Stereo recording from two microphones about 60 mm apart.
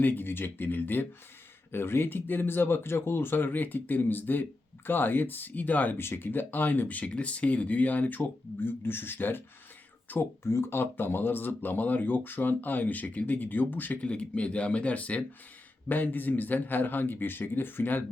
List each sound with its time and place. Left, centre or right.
0.0 s speech: left
6.0 s speech: left
10.4 s speech: left
14.0 s speech: left